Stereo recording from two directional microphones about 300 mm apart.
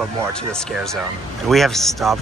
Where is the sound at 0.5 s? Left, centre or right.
Centre.